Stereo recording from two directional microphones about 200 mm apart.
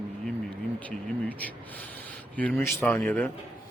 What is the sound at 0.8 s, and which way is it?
Speech, 5° left (ahead or behind).